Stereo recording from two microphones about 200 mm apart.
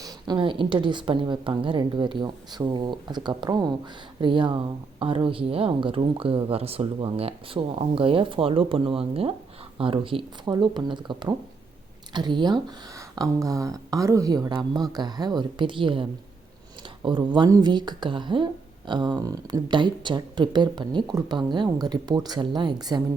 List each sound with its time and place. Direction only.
0.0 s speech: 20° right (ahead or behind)